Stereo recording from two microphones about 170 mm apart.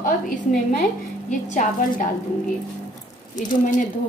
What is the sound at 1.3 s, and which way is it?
Speech, 45° left (ahead or behind).